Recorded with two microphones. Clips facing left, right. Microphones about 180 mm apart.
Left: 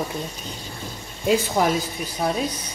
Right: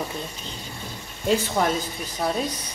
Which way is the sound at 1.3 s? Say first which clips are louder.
Left 2 dB; 10° left (ahead or behind).